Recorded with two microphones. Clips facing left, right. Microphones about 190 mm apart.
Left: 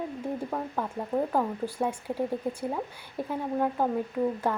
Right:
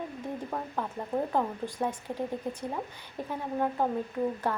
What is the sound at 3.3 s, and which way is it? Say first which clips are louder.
Speech: left 2 dB; centre (ahead or behind).